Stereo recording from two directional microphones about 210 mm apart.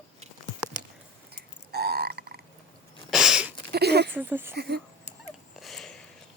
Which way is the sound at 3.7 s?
50° right (ahead or behind).